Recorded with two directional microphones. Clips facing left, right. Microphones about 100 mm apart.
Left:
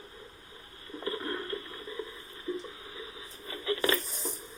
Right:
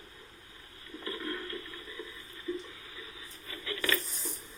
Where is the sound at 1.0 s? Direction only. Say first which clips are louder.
Left 3 dB; 30° left (ahead or behind).